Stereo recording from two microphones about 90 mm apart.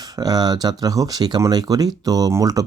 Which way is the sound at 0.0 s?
45° right (ahead or behind).